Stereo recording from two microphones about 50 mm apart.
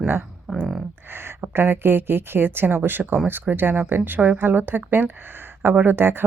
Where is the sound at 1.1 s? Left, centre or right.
Right.